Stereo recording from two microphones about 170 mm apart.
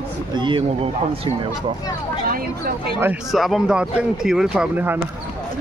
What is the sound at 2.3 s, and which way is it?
Speech, 60° right (ahead or behind).